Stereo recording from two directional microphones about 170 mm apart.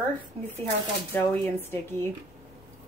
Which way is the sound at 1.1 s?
10° left (ahead or behind).